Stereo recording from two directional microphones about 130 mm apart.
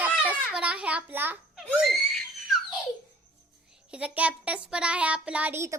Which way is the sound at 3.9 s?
10° right (ahead or behind).